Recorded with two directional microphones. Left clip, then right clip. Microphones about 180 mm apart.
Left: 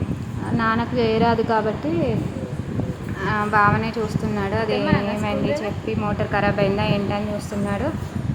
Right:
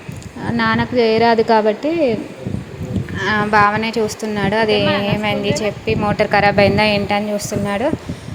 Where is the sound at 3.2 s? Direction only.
15° right (ahead or behind).